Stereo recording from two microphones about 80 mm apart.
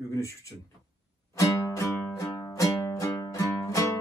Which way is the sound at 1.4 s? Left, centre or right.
Left.